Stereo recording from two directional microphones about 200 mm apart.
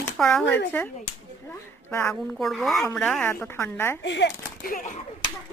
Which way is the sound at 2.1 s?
Centre (ahead or behind).